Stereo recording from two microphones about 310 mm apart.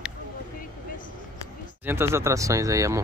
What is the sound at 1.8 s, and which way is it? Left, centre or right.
Speech, centre.